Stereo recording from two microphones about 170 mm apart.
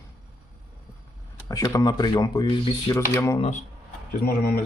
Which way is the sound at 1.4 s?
20° left (ahead or behind).